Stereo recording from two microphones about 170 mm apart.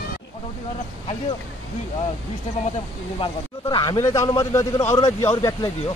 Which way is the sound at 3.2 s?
25° left (ahead or behind).